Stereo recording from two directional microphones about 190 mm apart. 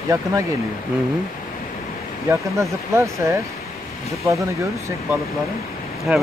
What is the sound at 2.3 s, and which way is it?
Speech, 15° right (ahead or behind).